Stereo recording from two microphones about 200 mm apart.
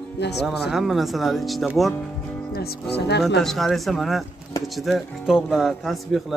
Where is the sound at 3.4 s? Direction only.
Centre (ahead or behind).